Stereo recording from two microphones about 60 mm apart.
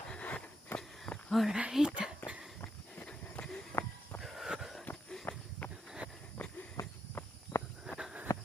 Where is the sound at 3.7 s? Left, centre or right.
Left.